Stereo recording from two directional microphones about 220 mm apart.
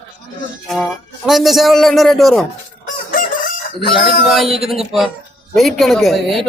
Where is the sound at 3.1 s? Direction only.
40° left (ahead or behind).